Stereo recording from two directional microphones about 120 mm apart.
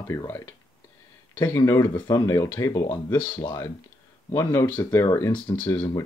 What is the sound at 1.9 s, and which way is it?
Speech, 35° left (ahead or behind).